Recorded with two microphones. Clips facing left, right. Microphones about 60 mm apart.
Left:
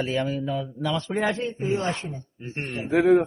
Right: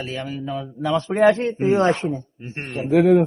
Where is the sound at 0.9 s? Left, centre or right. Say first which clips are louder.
Right 6 dB; right.